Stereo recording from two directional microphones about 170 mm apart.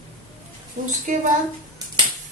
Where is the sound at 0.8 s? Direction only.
50° right (ahead or behind).